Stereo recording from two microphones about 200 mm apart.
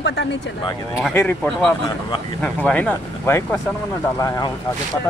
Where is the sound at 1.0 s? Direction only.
5° left (ahead or behind).